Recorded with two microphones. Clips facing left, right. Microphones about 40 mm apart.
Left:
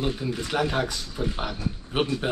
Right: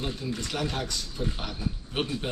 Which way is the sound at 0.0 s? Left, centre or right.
Centre.